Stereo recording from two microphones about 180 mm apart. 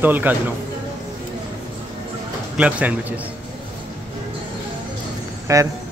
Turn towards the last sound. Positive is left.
turn(degrees=-15)  # may be behind; listen again after turning